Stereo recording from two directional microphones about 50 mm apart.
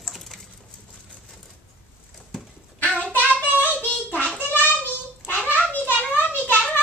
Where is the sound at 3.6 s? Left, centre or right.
Left.